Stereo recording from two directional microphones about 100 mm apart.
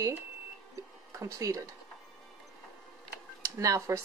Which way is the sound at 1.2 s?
30° right (ahead or behind).